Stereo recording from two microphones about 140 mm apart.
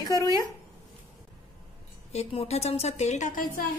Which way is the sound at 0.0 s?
25° left (ahead or behind).